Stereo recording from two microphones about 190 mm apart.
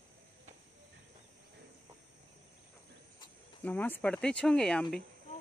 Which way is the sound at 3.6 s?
10° left (ahead or behind).